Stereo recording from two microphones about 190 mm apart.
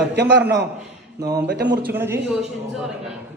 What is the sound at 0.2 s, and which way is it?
Speech, 65° right (ahead or behind).